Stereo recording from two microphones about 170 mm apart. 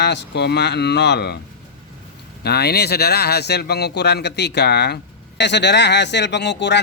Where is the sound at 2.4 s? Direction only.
70° left (ahead or behind).